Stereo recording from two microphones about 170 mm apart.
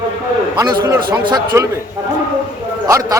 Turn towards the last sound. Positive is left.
turn(degrees=-20)  # may be behind; listen again after turning